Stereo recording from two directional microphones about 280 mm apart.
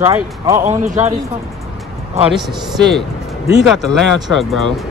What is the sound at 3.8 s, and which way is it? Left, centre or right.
Speech, centre.